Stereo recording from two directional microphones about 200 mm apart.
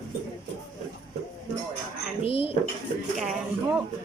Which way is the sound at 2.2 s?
30° left (ahead or behind).